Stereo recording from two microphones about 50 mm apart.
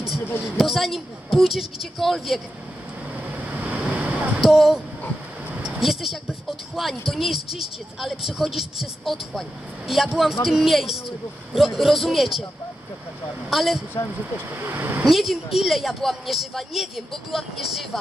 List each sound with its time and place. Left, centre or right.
0.4 s speech: centre
3.5 s waves: right
4.4 s speech: centre
13.5 s speech: centre
14.5 s speech: right
15.0 s speech: centre